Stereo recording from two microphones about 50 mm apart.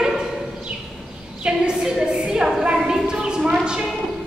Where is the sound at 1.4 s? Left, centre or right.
Centre.